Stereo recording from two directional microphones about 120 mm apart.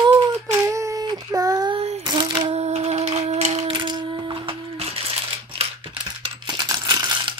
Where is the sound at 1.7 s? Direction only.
55° right (ahead or behind).